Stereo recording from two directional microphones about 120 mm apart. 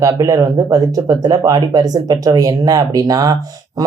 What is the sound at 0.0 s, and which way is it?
Speech, 25° right (ahead or behind).